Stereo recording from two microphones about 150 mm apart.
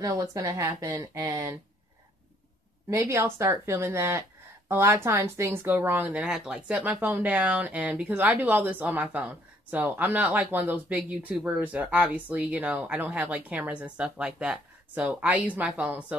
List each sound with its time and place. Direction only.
0.0 s speech: 20° right (ahead or behind)
2.9 s speech: 20° right (ahead or behind)